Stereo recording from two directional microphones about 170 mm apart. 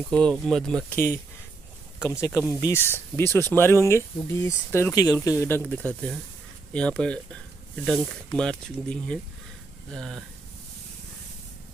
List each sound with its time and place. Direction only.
0.1 s speech: 5° left (ahead or behind)
5.6 s speech: 10° left (ahead or behind)